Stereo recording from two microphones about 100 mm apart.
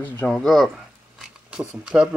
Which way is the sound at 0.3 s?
5° left (ahead or behind).